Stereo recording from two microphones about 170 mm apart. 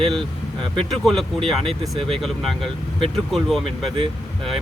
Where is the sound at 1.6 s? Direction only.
30° right (ahead or behind).